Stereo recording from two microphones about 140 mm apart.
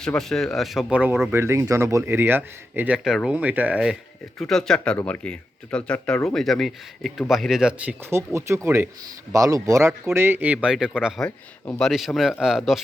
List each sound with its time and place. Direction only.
0.0 s speech: 5° left (ahead or behind)
4.4 s speech: 5° left (ahead or behind)
8.1 s speech: 20° right (ahead or behind)
11.2 s speech: 25° left (ahead or behind)
11.8 s speech: centre (ahead or behind)